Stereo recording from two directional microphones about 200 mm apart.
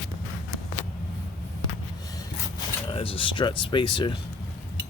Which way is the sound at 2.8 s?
25° left (ahead or behind).